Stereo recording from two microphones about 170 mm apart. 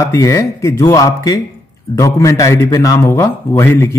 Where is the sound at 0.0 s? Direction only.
20° left (ahead or behind).